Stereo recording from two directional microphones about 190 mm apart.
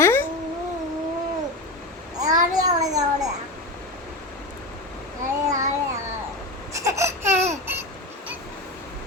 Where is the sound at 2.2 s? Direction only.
20° right (ahead or behind).